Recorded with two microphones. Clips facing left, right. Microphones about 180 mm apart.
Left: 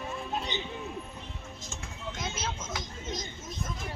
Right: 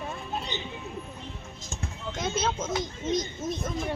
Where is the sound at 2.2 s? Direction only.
60° right (ahead or behind).